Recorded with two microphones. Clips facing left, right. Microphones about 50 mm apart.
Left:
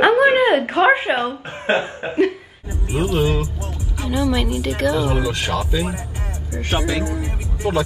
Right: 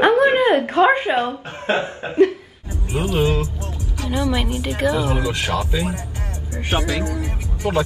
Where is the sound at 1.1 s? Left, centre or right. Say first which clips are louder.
Right 1 dB; left.